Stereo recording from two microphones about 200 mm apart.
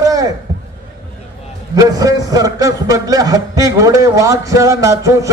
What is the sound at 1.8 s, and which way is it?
A man's voice, 20° right (ahead or behind).